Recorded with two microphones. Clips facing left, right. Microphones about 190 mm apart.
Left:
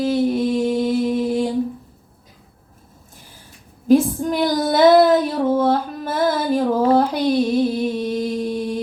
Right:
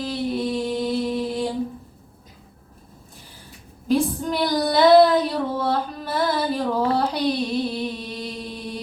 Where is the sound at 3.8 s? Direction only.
45° left (ahead or behind).